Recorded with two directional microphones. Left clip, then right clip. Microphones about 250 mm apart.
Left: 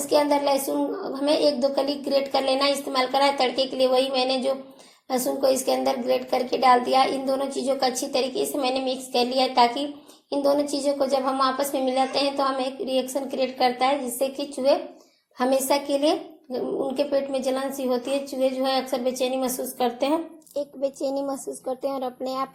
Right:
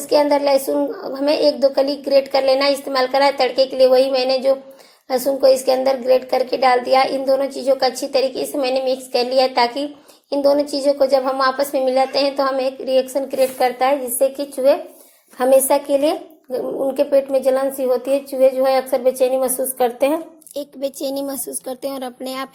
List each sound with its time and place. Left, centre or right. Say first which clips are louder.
0.0 s speech: right 6 dB; centre
20.5 s speech: right 2 dB; right